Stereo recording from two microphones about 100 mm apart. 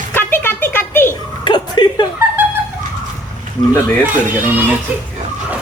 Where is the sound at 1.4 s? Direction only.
50° left (ahead or behind).